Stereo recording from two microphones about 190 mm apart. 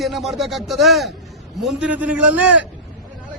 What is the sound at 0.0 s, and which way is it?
A man's voice, centre (ahead or behind).